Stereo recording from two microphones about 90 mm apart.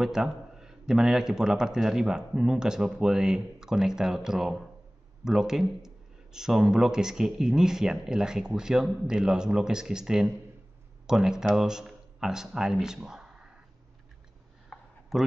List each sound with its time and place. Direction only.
0.0 s a man's voice: 5° right (ahead or behind)
14.7 s a sound: 15° left (ahead or behind)
15.1 s speech: centre (ahead or behind)